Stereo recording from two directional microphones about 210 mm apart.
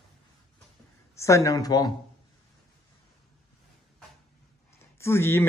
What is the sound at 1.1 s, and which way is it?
Speech, 15° left (ahead or behind).